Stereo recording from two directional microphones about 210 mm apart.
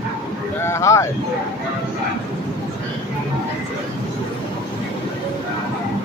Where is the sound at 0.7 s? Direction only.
15° left (ahead or behind).